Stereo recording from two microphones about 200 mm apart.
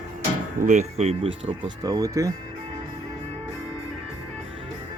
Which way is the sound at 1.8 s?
20° right (ahead or behind).